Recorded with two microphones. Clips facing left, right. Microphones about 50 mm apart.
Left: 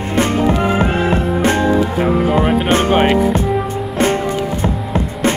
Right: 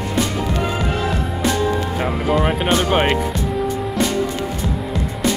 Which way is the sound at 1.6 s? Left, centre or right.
Centre.